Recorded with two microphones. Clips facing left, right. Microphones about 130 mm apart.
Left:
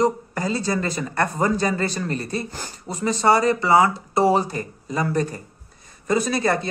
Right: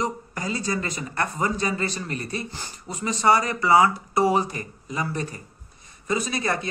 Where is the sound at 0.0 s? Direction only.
35° left (ahead or behind).